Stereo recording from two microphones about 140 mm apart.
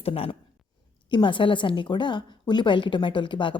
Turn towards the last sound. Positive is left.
turn(degrees=35)  # may be behind; listen again after turning